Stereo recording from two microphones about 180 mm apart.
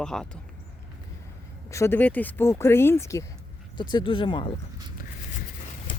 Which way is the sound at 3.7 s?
25° left (ahead or behind).